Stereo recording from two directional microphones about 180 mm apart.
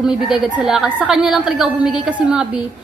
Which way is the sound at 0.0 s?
5° right (ahead or behind).